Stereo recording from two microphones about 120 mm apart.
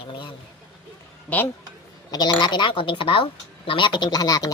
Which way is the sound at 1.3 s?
15° left (ahead or behind).